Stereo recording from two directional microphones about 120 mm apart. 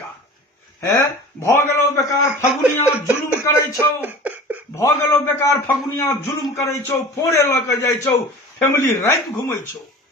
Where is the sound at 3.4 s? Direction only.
20° left (ahead or behind).